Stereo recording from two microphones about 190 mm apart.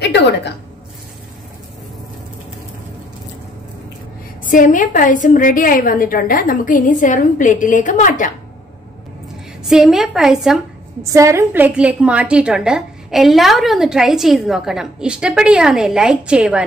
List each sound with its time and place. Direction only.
0.0 s a woman's voice: 65° left (ahead or behind)
4.4 s a woman's voice: 45° left (ahead or behind)
9.7 s a woman's voice: centre (ahead or behind)
11.0 s a woman's voice: 15° right (ahead or behind)